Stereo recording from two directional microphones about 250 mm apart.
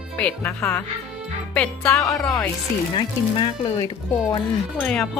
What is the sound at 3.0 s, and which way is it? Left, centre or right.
Speech, centre.